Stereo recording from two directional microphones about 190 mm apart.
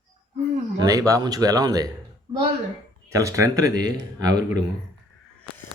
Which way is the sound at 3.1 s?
15° right (ahead or behind).